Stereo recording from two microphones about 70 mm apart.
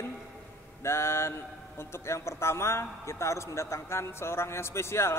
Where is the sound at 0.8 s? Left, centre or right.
Left.